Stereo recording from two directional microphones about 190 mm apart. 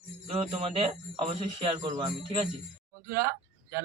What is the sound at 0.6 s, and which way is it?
Speech, 30° right (ahead or behind).